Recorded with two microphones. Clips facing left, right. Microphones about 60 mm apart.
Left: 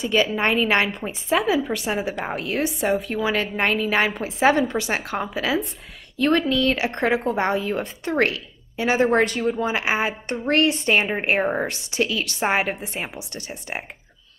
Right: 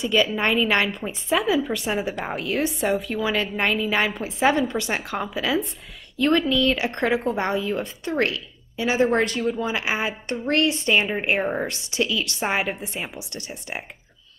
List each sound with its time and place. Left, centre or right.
0.0 s a woman's voice: left
1.9 s a woman's voice: centre
2.3 s a woman's voice: left
3.3 s a woman's voice: centre; by 6.8 s left
6.8 s a woman's voice: left
11.3 s a woman's voice: centre
11.6 s a woman's voice: left